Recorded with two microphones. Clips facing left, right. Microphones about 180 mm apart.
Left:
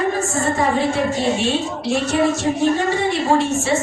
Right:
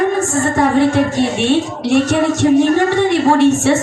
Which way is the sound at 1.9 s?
85° right.